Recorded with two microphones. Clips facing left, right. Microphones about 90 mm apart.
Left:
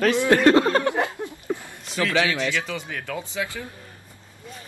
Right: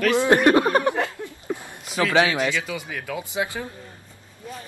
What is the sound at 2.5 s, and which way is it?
Speech, 10° right (ahead or behind).